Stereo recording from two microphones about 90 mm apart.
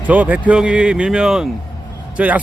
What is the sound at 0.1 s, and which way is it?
A man's voice, 15° right (ahead or behind).